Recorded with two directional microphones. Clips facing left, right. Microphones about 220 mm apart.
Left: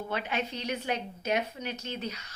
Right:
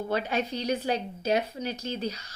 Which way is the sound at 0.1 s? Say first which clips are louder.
Right 5 dB; 40° right (ahead or behind).